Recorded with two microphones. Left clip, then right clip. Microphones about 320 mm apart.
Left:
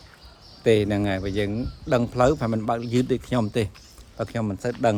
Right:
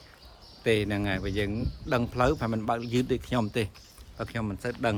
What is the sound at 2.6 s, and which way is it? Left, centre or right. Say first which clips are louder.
Speech: left 4 dB; centre.